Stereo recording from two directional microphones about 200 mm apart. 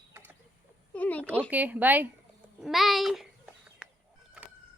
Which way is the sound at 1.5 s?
10° right (ahead or behind).